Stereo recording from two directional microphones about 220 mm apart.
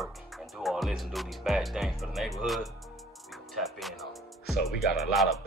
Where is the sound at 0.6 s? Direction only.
Centre (ahead or behind).